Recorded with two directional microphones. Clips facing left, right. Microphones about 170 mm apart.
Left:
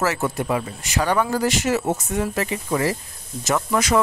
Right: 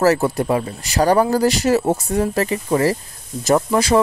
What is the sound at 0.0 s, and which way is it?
Speech, 35° right (ahead or behind).